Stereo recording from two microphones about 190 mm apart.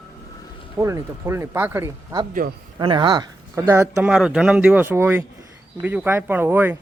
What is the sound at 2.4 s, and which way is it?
Speech, 50° right (ahead or behind).